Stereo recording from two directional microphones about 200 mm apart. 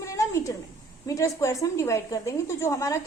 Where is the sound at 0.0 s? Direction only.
15° left (ahead or behind).